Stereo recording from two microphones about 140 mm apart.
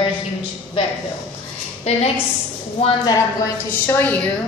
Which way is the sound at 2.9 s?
30° left (ahead or behind).